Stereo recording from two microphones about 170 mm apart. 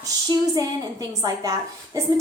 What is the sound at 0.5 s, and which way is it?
A woman's voice, 20° right (ahead or behind).